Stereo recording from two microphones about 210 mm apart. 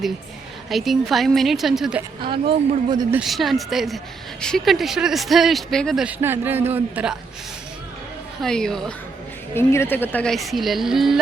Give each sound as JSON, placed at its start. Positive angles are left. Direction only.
{"t": 0.7, "sound": "speech", "side_deg": 0}
{"t": 2.2, "sound": "speech", "side_deg": -25}
{"t": 3.1, "sound": "speech", "side_deg": 0}
{"t": 8.4, "sound": "speech", "side_deg": 5}